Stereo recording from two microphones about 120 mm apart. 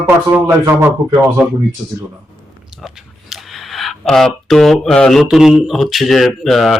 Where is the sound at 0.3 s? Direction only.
20° right (ahead or behind).